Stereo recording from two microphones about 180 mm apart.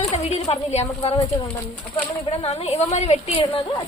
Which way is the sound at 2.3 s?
35° left (ahead or behind).